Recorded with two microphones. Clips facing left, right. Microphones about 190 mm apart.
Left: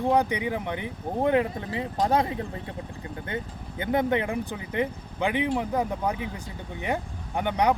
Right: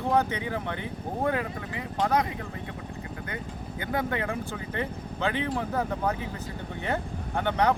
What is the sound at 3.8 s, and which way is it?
Speech, 20° left (ahead or behind).